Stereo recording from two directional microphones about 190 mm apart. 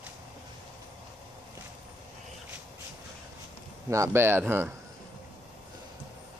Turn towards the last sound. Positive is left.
turn(degrees=-10)  # may be behind; listen again after turning